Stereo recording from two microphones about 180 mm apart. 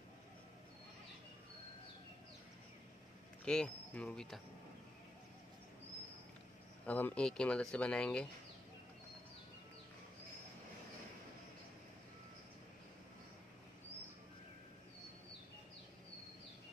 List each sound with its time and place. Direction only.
3.4 s speech: 5° left (ahead or behind)
6.9 s speech: 10° left (ahead or behind)